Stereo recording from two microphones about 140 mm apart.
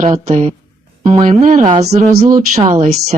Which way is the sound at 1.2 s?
60° right (ahead or behind).